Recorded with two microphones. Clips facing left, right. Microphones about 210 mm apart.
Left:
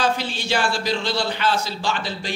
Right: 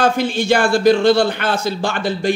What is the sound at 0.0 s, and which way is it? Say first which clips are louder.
Speech: right 7 dB; 50° right (ahead or behind).